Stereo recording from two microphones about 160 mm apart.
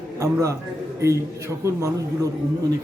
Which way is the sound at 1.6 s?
20° right (ahead or behind).